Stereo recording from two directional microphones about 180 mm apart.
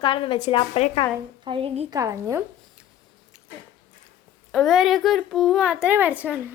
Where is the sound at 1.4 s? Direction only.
30° right (ahead or behind).